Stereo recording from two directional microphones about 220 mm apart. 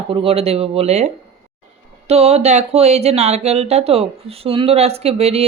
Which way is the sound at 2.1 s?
30° right (ahead or behind).